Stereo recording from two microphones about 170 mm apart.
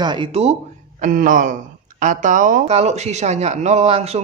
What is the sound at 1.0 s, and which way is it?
Speech, 50° right (ahead or behind).